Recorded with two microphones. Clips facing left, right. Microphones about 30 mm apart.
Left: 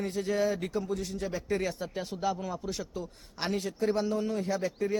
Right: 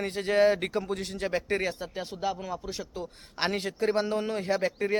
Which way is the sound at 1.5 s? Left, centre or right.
Right.